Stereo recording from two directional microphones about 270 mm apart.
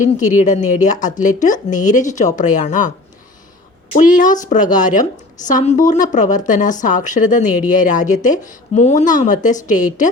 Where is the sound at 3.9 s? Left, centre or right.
Left.